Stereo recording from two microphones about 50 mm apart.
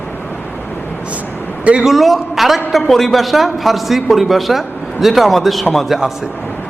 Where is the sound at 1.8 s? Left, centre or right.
Centre.